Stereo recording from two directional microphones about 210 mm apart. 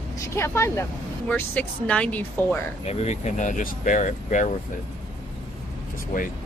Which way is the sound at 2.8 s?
30° left (ahead or behind).